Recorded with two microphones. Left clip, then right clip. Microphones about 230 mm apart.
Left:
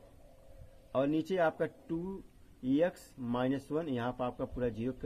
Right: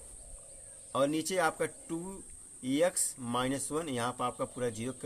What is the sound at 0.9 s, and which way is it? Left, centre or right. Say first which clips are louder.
Speech: right 1 dB; centre.